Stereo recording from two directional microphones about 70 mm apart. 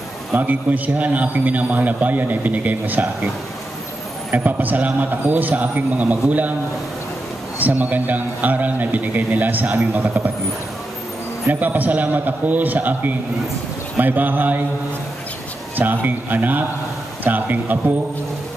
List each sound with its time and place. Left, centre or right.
0.4 s a man's voice: right
4.3 s a man's voice: right
7.5 s a man's voice: right
11.6 s a man's voice: right
15.7 s a man's voice: right